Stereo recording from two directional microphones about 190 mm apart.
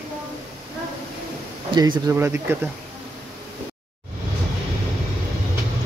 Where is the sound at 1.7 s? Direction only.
20° right (ahead or behind).